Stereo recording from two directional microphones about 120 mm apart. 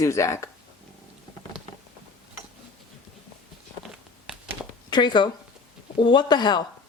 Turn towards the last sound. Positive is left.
turn(degrees=40)  # may be behind; listen again after turning